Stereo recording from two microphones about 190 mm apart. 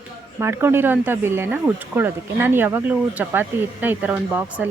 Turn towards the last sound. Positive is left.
turn(degrees=-10)  # may be behind; listen again after turning